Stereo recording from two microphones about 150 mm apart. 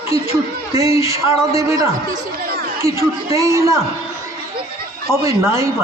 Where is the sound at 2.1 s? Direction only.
80° right.